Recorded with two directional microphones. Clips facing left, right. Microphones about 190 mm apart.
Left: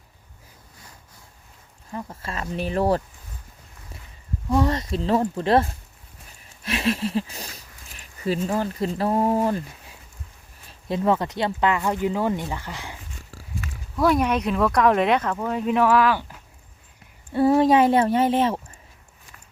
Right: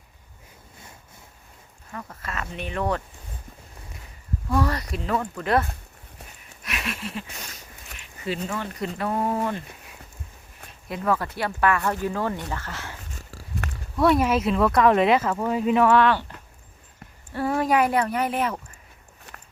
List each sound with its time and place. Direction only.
1.9 s speech: 25° left (ahead or behind)
4.4 s speech: 20° left (ahead or behind)
6.4 s a sound: 30° left (ahead or behind)
8.4 s speech: 35° left (ahead or behind)
10.7 s speech: 30° left (ahead or behind)
13.9 s speech: centre (ahead or behind)
17.4 s speech: 30° left (ahead or behind)
19.3 s walk: 65° right (ahead or behind)